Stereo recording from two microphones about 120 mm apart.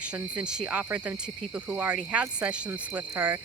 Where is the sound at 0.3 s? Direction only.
10° right (ahead or behind).